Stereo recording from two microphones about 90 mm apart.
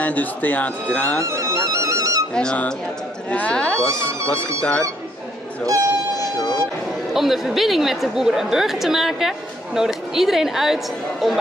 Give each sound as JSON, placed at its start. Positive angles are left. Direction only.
{"t": 0.0, "sound": "speech", "side_deg": 20}
{"t": 1.2, "sound": "music", "side_deg": -35}
{"t": 2.3, "sound": "speech", "side_deg": 10}
{"t": 6.1, "sound": "a sound", "side_deg": 45}
{"t": 7.2, "sound": "a woman's voice", "side_deg": 0}